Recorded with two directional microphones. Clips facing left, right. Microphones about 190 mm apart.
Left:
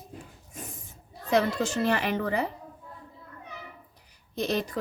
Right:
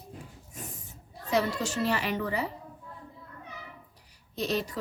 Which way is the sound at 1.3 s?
55° left (ahead or behind).